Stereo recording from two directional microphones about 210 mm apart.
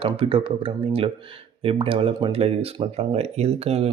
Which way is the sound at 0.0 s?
25° right (ahead or behind).